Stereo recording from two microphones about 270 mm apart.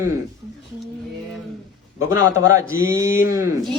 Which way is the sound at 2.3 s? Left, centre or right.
Centre.